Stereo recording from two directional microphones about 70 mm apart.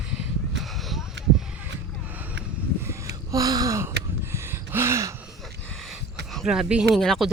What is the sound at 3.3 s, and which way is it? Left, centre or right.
Gasp, right.